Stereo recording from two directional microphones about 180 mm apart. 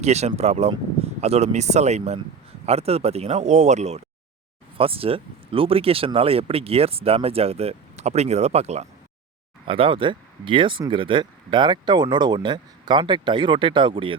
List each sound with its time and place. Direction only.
0.0 s speech: 40° right (ahead or behind)